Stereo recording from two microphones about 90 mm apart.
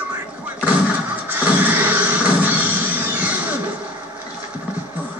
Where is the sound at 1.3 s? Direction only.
20° right (ahead or behind).